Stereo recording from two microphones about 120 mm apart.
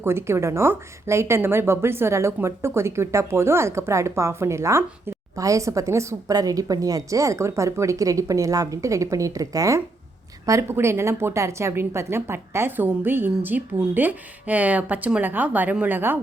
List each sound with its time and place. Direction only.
0.0 s a woman's voice: 20° right (ahead or behind)